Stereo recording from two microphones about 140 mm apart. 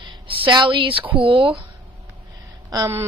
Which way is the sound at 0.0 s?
40° right (ahead or behind).